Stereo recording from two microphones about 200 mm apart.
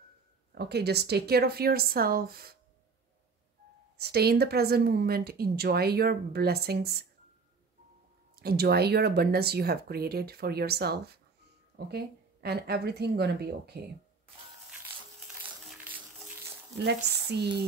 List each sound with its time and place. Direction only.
0.6 s speech: 55° right (ahead or behind)
4.0 s speech: 55° right (ahead or behind)
8.4 s speech: 50° right (ahead or behind)
15.4 s music: 10° right (ahead or behind)
16.7 s speech: 55° right (ahead or behind)